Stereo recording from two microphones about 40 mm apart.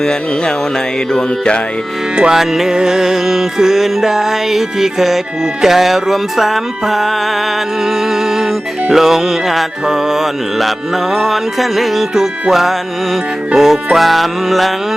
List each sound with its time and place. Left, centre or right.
0.0 s music: centre
2.3 s music: centre
8.9 s music: centre